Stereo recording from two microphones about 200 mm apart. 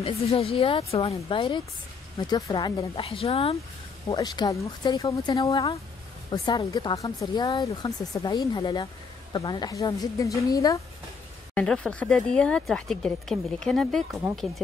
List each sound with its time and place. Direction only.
0.0 s speech: 30° left (ahead or behind)
2.1 s a woman's voice: 15° left (ahead or behind)
11.5 s speech: 5° left (ahead or behind)